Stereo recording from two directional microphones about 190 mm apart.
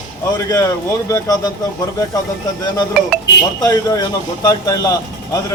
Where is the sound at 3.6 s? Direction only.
20° left (ahead or behind).